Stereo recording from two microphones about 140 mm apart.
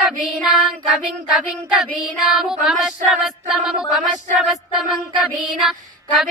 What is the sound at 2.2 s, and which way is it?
Female singing, 5° right (ahead or behind).